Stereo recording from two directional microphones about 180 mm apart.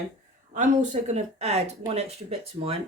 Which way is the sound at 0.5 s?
45° right (ahead or behind).